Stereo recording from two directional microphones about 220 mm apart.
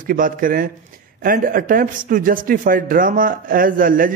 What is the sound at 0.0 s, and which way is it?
A man's voice, 40° right (ahead or behind).